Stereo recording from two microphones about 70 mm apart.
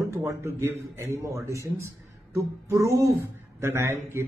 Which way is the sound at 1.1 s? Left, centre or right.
Right.